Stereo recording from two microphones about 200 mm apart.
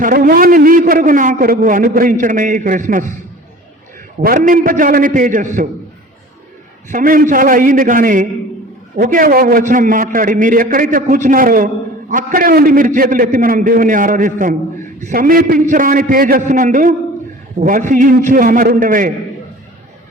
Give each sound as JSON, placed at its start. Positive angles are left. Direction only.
{"t": 0.0, "sound": "a man's voice", "side_deg": -45}
{"t": 4.2, "sound": "a man's voice", "side_deg": -45}
{"t": 6.8, "sound": "a man's voice", "side_deg": -45}